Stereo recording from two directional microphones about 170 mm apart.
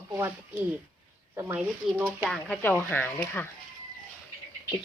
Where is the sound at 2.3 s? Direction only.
5° left (ahead or behind).